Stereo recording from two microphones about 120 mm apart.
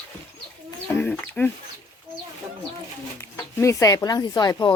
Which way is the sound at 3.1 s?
20° left (ahead or behind).